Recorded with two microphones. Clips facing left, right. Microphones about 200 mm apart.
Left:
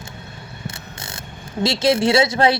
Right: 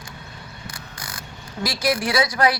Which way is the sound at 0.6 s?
25° left (ahead or behind).